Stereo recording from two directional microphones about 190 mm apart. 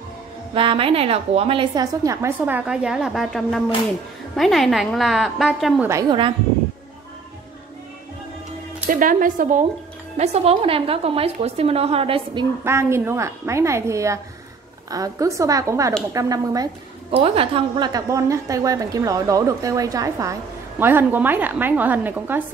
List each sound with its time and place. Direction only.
0.6 s a woman's voice: 30° right (ahead or behind); by 5.9 s centre (ahead or behind)
5.9 s a woman's voice: 20° right (ahead or behind)
9.0 s a woman's voice: 45° right (ahead or behind); by 12.4 s 30° right (ahead or behind)
12.6 s a woman's voice: 15° right (ahead or behind)
17.1 s a woman's voice: 30° right (ahead or behind); by 22.4 s 10° right (ahead or behind)